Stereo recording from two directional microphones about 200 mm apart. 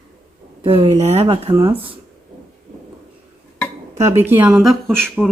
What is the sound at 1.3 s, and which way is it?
Speech, 20° right (ahead or behind).